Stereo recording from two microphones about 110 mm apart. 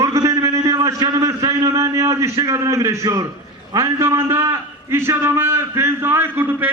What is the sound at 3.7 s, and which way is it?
A man's voice, 25° right (ahead or behind).